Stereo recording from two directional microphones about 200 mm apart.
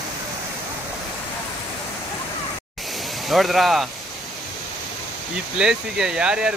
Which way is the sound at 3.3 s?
Centre (ahead or behind).